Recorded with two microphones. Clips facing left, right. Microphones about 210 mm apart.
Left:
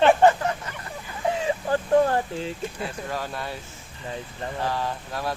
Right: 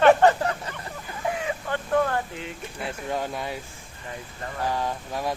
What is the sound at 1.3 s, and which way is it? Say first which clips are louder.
Chicken: left 6 dB; 25° left (ahead or behind).